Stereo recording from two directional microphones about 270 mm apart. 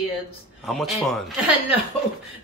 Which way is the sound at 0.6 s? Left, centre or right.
Centre.